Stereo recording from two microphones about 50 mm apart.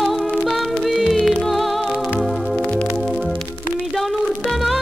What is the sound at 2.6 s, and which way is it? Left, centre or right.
Music, left.